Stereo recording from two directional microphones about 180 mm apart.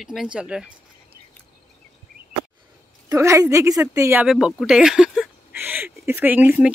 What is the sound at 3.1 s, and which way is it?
Speech, 15° right (ahead or behind).